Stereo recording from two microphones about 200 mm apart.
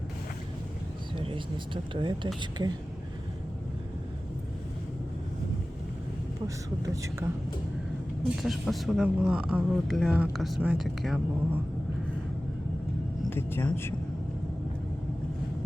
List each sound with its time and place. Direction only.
1.1 s speech: 25° right (ahead or behind)
6.8 s speech: 15° right (ahead or behind)
8.4 s speech: centre (ahead or behind)
13.3 s speech: 10° left (ahead or behind)